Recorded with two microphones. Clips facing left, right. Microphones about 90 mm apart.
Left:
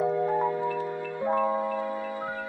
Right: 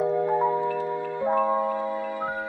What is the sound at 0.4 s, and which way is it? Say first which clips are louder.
Music: right 3 dB; 20° right (ahead or behind).